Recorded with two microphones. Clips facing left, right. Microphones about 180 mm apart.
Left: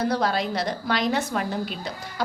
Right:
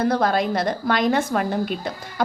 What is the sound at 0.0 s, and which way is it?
A woman's voice, 55° right (ahead or behind).